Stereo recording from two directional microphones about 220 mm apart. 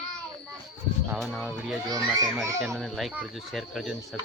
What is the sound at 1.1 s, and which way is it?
Speech, centre (ahead or behind).